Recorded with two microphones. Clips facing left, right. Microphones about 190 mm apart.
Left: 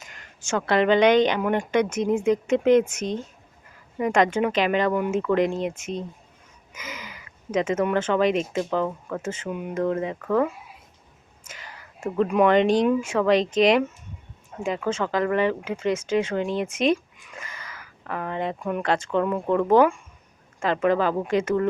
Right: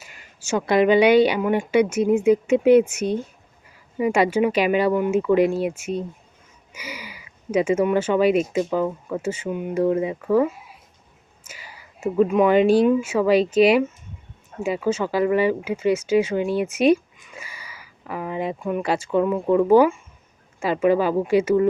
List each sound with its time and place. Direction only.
0.0 s speech: 5° right (ahead or behind)
9.7 s speech: 10° right (ahead or behind)